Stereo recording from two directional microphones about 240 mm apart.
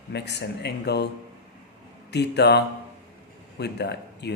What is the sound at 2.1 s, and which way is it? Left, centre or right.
Speech, left.